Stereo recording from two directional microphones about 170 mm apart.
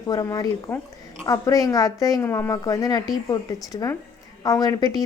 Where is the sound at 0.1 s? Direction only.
20° left (ahead or behind).